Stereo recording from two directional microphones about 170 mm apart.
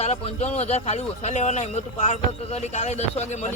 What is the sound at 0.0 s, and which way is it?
Speech, 40° left (ahead or behind).